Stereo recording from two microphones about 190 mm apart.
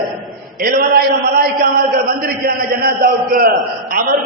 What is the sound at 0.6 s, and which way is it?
A man's voice, 50° right (ahead or behind).